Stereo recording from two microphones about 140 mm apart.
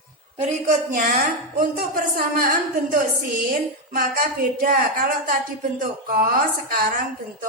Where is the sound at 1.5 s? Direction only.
90° right.